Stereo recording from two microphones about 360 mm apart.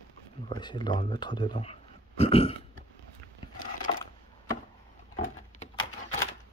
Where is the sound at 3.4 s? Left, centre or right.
Left.